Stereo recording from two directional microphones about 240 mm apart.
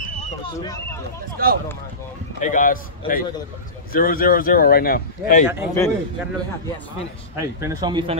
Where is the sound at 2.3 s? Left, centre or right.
Left.